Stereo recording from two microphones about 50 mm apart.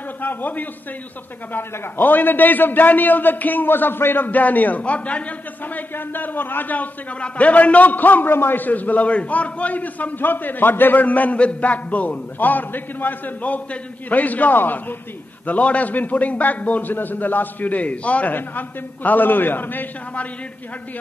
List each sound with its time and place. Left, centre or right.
0.2 s a man's voice: left
5.8 s a man's voice: left
15.4 s a man's voice: left